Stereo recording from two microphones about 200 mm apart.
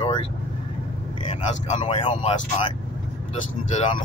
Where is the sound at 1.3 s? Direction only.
30° left (ahead or behind).